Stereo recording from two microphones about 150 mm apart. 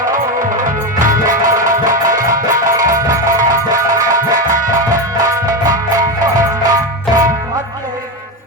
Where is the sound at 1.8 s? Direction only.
25° right (ahead or behind).